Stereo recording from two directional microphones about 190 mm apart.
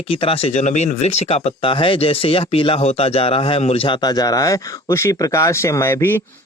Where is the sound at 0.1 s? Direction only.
30° left (ahead or behind).